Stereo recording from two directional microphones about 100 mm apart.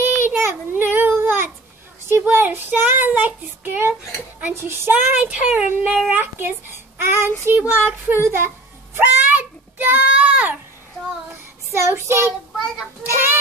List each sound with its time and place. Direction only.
0.0 s child singing: 25° right (ahead or behind)
2.0 s a child's voice: 25° right (ahead or behind)
11.7 s a child's voice: 25° right (ahead or behind)